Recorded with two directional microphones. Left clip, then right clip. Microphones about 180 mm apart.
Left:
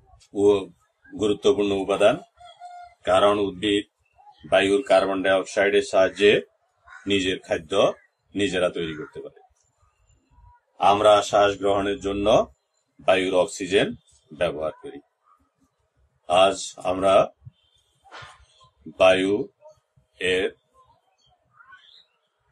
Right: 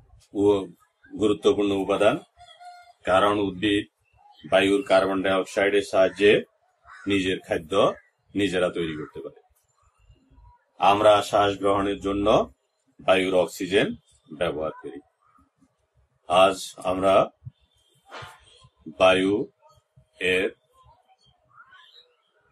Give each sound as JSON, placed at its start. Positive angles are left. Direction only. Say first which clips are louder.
{"t": 0.3, "sound": "speech", "louder": "left 2 dB", "side_deg": 15}
{"t": 3.2, "sound": "speech", "louder": "left 2 dB", "side_deg": 15}
{"t": 10.8, "sound": "a man's voice", "louder": "left 1 dB", "side_deg": 15}
{"t": 16.3, "sound": "speech", "louder": "even", "side_deg": 15}
{"t": 18.9, "sound": "speech", "louder": "left 1 dB", "side_deg": 25}
{"t": 20.2, "sound": "speech", "louder": "even", "side_deg": 15}